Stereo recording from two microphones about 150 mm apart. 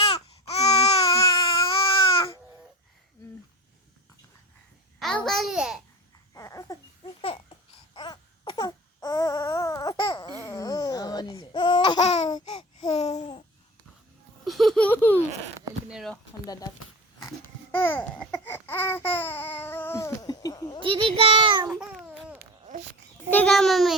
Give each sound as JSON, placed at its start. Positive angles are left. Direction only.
{"t": 0.0, "sound": "baby cry", "side_deg": 40}
{"t": 4.9, "sound": "a child's voice", "side_deg": 5}
{"t": 6.3, "sound": "babbling", "side_deg": 25}
{"t": 7.9, "sound": "baby cry", "side_deg": 30}
{"t": 12.5, "sound": "babbling", "side_deg": 45}
{"t": 14.4, "sound": "laughter", "side_deg": 0}
{"t": 14.8, "sound": "baby laughter", "side_deg": 15}
{"t": 15.9, "sound": "a sound", "side_deg": -5}
{"t": 17.2, "sound": "babbling", "side_deg": 15}
{"t": 20.8, "sound": "a sound", "side_deg": -35}
{"t": 21.7, "sound": "babbling", "side_deg": -5}
{"t": 23.3, "sound": "babbling", "side_deg": 5}